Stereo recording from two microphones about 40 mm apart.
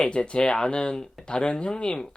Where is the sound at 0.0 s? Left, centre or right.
Left.